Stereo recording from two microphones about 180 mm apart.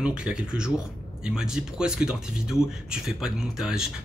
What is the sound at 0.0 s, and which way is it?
Speech, 5° right (ahead or behind).